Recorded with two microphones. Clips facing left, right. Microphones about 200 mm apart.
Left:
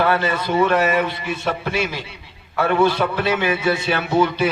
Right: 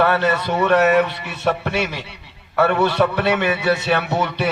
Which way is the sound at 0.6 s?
65° right (ahead or behind).